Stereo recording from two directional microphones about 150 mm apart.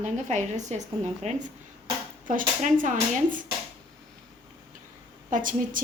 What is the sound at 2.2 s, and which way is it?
Speech, 60° right (ahead or behind).